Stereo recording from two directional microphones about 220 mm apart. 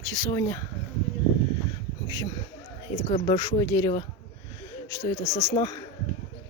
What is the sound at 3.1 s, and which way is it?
Speech, 20° left (ahead or behind).